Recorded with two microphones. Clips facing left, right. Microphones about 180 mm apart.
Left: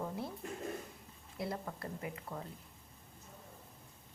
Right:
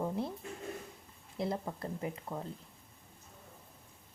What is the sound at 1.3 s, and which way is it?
Speech, 25° right (ahead or behind).